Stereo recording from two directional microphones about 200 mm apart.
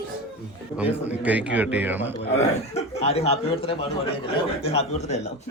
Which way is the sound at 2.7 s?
30° left (ahead or behind).